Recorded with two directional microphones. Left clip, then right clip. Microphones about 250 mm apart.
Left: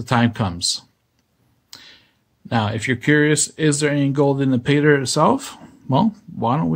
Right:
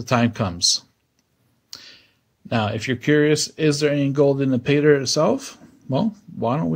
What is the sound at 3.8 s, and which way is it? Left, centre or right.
Speech, centre.